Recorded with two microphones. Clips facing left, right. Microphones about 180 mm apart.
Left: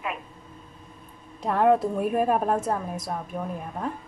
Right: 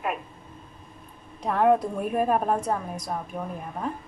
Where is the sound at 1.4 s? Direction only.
Centre (ahead or behind).